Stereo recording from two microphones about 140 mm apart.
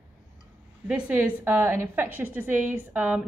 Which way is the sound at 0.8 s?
10° right (ahead or behind).